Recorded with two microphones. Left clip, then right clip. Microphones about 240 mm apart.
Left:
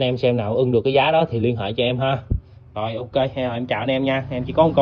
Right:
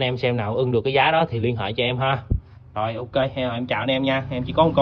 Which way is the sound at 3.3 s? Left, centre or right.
Centre.